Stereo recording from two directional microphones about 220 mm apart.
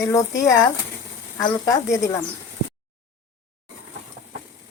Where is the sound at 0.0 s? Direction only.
15° left (ahead or behind).